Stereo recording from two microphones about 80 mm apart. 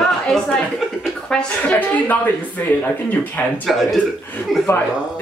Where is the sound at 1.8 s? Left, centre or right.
Left.